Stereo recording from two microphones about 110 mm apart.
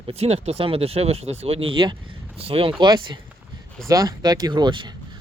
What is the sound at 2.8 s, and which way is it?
Speech, 45° right (ahead or behind).